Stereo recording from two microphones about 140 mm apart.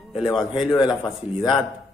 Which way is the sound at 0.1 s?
Centre (ahead or behind).